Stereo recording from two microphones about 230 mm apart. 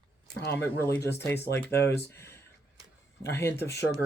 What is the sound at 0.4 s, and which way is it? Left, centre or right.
Speech, centre.